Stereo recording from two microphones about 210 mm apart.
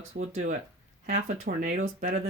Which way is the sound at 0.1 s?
35° right (ahead or behind).